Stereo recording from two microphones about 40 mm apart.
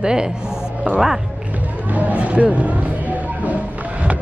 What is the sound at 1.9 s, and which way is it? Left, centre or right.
Music, right.